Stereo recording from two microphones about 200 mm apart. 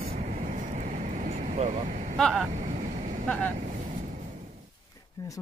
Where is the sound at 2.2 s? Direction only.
Centre (ahead or behind).